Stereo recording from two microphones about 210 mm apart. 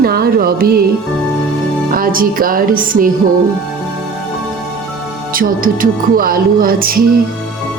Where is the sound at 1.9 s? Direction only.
45° right (ahead or behind).